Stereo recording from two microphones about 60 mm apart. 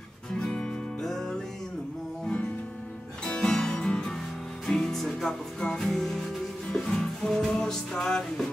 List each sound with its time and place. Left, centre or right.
0.4 s music: centre
2.2 s music: centre